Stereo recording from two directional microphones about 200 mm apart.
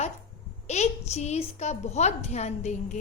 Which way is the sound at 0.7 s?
35° left (ahead or behind).